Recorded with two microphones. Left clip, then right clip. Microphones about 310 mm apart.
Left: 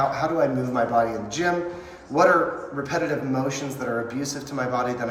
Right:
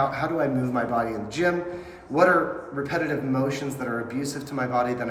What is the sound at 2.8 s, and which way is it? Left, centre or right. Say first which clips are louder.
Speech: left 1 dB; centre.